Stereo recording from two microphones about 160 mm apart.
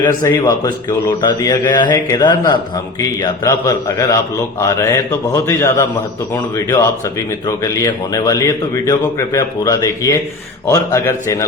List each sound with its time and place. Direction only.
0.2 s a man's voice: 20° left (ahead or behind)